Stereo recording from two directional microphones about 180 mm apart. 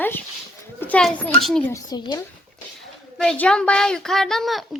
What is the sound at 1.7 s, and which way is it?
Speech, 25° left (ahead or behind).